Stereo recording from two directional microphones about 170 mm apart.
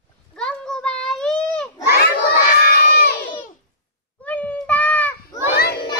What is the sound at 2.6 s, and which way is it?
Crowd, 60° left (ahead or behind).